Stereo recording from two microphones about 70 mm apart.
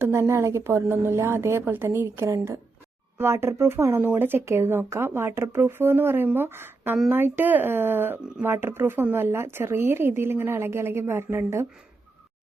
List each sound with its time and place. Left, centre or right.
0.0 s speech: right